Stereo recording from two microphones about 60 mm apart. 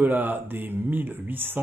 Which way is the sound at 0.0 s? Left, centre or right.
Right.